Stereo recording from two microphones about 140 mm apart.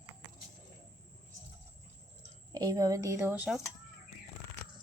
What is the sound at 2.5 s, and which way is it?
Speech, 30° right (ahead or behind).